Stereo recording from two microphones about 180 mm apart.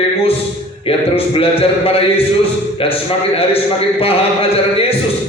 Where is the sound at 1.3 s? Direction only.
30° left (ahead or behind).